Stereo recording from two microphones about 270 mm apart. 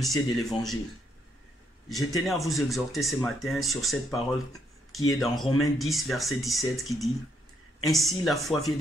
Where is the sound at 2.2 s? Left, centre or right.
Centre.